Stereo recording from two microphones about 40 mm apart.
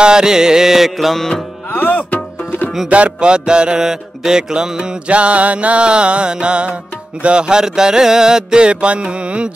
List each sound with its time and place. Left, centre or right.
0.0 s music: centre
1.7 s music: left
2.9 s music: right
3.8 s music: centre
5.0 s music: right